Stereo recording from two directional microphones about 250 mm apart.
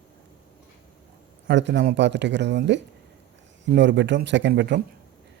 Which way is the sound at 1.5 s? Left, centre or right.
Right.